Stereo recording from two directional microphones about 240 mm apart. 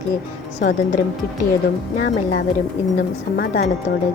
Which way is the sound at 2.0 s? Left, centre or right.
Left.